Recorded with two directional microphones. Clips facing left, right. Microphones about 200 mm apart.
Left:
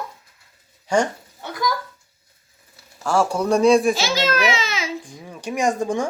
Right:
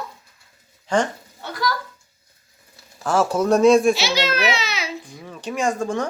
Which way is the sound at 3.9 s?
45° left (ahead or behind).